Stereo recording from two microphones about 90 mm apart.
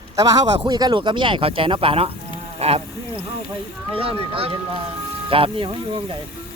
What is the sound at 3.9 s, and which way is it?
Speech, 90° right.